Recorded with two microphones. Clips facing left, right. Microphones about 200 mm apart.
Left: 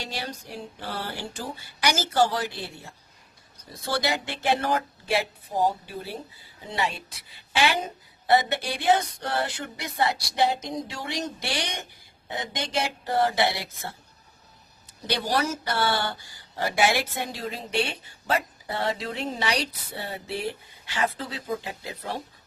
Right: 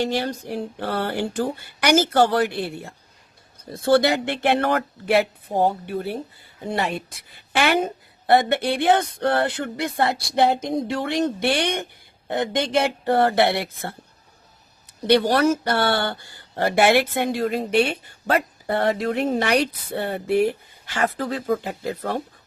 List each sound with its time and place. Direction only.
0.0 s speech: 55° right (ahead or behind)
15.0 s speech: 60° right (ahead or behind)